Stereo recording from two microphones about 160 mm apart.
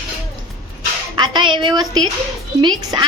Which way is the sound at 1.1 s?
30° right (ahead or behind).